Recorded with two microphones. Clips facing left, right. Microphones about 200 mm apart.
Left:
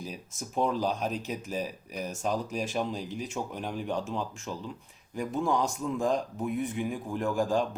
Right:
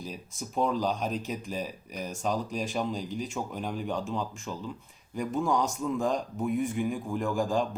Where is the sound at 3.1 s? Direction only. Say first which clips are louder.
Right 2 dB; 40° right (ahead or behind).